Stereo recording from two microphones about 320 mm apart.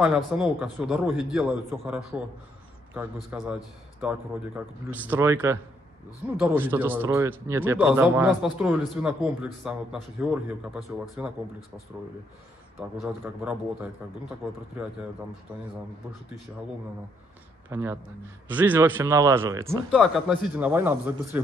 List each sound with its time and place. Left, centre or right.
0.0 s a man's voice: centre
13.0 s a man's voice: centre
17.6 s speech: centre